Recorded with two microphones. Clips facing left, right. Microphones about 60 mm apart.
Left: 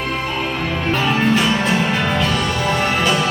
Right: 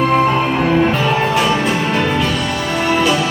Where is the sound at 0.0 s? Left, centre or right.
Right.